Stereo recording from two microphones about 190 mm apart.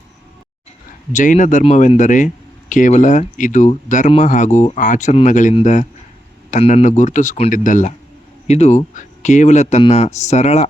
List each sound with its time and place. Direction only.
1.1 s speech: 40° left (ahead or behind)